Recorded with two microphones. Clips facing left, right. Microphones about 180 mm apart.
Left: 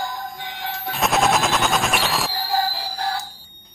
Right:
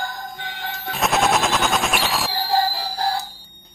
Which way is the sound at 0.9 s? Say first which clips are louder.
Even; centre (ahead or behind).